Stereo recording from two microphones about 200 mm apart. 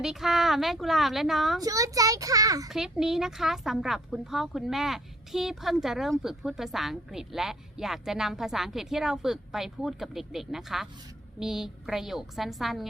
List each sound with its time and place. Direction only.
0.0 s speech: centre (ahead or behind)
1.6 s a child's voice: 15° right (ahead or behind)
2.6 s speech: centre (ahead or behind)